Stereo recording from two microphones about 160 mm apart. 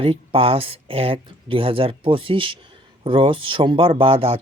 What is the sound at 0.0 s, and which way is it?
Speech, 35° right (ahead or behind).